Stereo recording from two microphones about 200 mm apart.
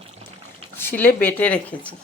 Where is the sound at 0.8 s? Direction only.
10° left (ahead or behind).